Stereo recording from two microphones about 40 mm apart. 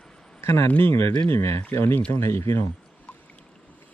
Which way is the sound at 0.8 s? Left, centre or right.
Left.